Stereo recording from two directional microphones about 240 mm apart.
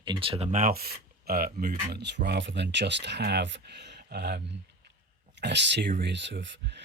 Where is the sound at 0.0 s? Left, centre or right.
Right.